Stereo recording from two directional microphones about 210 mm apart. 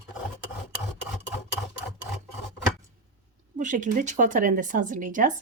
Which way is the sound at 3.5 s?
35° right (ahead or behind).